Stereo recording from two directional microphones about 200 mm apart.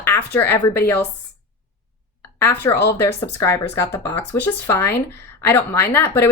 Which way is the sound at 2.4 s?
10° left (ahead or behind).